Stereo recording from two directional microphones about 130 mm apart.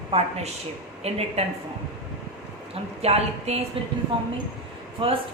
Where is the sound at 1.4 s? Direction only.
50° right (ahead or behind).